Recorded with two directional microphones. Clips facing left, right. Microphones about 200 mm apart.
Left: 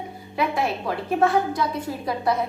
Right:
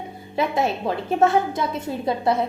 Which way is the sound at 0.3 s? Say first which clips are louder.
Right 2 dB; 25° right (ahead or behind).